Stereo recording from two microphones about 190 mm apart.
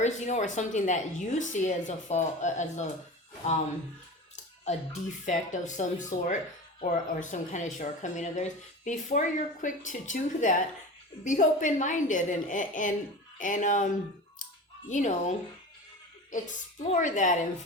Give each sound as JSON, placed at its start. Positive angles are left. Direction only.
{"t": 0.0, "sound": "a woman's voice", "side_deg": 40}
{"t": 4.6, "sound": "a woman's voice", "side_deg": 35}